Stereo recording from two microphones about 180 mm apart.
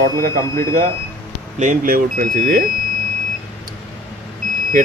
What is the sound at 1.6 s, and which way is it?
Speech, 50° right (ahead or behind).